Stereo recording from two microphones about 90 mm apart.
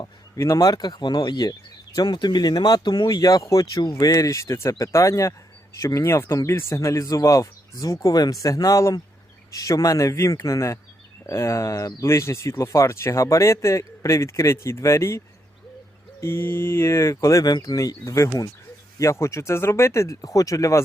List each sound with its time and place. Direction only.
0.3 s speech: 35° left (ahead or behind)
16.2 s speech: 25° left (ahead or behind)